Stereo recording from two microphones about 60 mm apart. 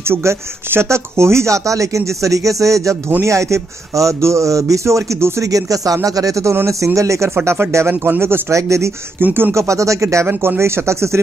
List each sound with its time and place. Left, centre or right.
0.1 s speech: right
6.5 s a man's voice: right
8.0 s a man's voice: right
9.2 s speech: right
9.5 s a man's voice: right